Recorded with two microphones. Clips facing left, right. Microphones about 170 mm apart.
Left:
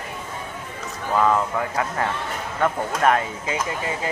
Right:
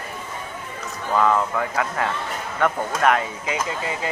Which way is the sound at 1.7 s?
25° left (ahead or behind).